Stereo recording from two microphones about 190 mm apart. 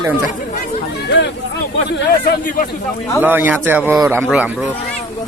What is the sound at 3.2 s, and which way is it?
A man's voice, 10° right (ahead or behind).